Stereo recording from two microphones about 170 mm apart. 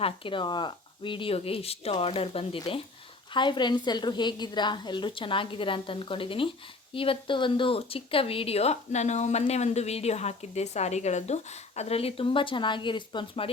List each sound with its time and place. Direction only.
0.0 s a woman's voice: 30° left (ahead or behind)